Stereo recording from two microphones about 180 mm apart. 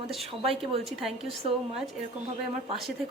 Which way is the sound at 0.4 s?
30° right (ahead or behind).